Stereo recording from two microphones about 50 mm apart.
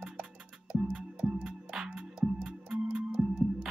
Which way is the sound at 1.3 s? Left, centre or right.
Centre.